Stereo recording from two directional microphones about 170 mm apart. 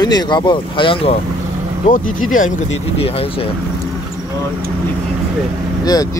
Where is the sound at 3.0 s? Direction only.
35° left (ahead or behind).